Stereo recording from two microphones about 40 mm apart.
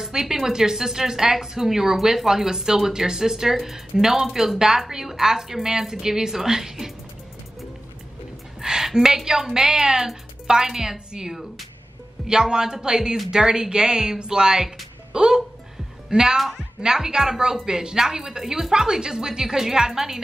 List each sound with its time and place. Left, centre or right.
0.0 s a woman's voice: centre
8.5 s a woman's voice: centre